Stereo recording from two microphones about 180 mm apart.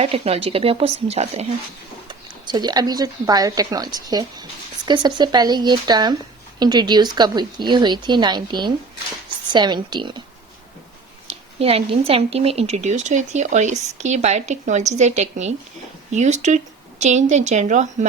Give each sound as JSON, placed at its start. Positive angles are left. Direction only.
{"t": 0.0, "sound": "a woman's voice", "side_deg": -35}
{"t": 2.0, "sound": "speech", "side_deg": -25}
{"t": 11.3, "sound": "a woman's voice", "side_deg": -35}